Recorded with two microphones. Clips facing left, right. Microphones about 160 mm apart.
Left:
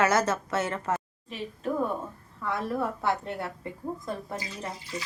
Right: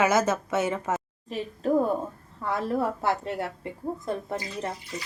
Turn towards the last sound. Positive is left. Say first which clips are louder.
# right 4 dB
turn(degrees=-25)  # may be behind; listen again after turning